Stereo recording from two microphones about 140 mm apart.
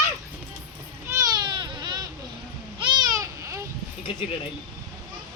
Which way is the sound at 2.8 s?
30° right (ahead or behind).